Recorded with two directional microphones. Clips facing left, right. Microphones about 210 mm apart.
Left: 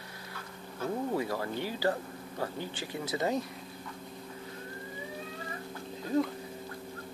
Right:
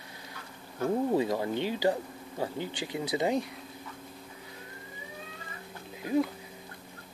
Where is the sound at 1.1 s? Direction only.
20° right (ahead or behind).